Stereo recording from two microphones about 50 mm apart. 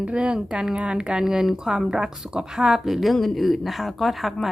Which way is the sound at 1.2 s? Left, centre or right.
Centre.